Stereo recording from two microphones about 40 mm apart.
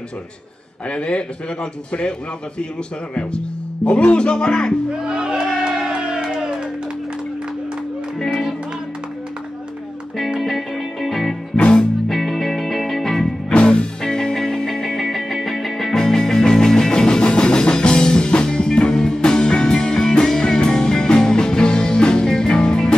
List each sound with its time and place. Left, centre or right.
0.8 s speech: left
3.2 s speech: left
5.0 s speech: right
5.6 s crowd: centre
10.4 s music: centre
13.5 s music: left